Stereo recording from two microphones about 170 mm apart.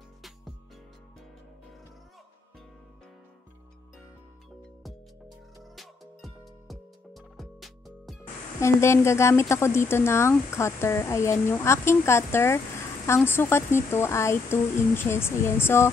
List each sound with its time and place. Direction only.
5.6 s music: centre (ahead or behind)
8.5 s speech: 15° left (ahead or behind)